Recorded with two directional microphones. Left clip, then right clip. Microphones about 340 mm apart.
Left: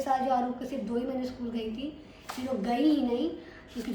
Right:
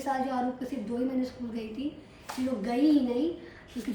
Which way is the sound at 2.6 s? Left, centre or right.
Centre.